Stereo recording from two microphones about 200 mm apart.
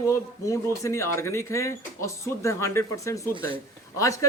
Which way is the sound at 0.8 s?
15° left (ahead or behind).